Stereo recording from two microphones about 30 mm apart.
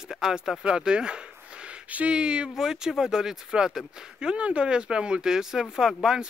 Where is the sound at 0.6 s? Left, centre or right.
Right.